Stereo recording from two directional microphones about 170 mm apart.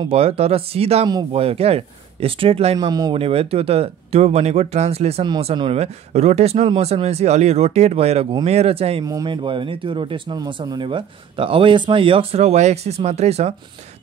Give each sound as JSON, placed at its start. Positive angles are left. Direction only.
{"t": 0.1, "sound": "speech", "side_deg": -35}
{"t": 2.9, "sound": "speech", "side_deg": -20}
{"t": 3.2, "sound": "speech", "side_deg": -35}
{"t": 9.0, "sound": "speech", "side_deg": -25}